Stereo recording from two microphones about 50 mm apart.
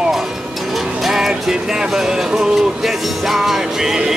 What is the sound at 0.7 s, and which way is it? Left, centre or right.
Music, centre.